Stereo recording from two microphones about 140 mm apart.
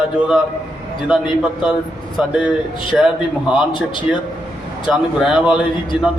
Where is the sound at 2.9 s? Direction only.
Centre (ahead or behind).